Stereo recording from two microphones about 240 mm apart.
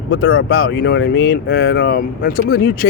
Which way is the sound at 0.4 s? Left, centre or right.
Left.